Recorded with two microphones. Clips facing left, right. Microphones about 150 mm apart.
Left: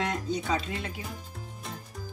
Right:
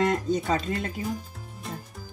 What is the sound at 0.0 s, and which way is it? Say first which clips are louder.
Speech: right 6 dB; 50° right (ahead or behind).